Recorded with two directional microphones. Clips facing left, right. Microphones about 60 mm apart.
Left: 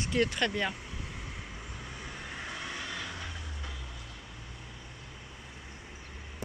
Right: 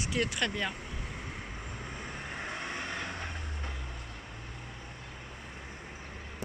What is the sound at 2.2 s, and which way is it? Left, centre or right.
Vehicle, right.